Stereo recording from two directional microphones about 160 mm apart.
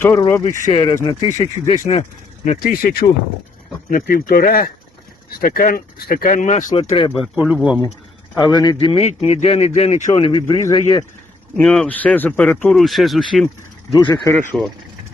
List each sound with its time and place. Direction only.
0.0 s speech: 15° left (ahead or behind)
0.7 s a man's voice: 30° left (ahead or behind)
1.3 s speech: 50° left (ahead or behind)
6.7 s a man's voice: 35° left (ahead or behind)
7.2 s speech: 5° right (ahead or behind)
8.4 s a man's voice: 25° left (ahead or behind)
11.5 s speech: 5° left (ahead or behind)
13.9 s speech: 25° left (ahead or behind)
14.5 s speech: centre (ahead or behind)